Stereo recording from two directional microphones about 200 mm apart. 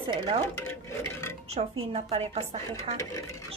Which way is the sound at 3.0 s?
15° left (ahead or behind).